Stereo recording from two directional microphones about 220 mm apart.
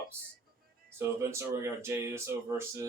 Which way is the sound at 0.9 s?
10° right (ahead or behind).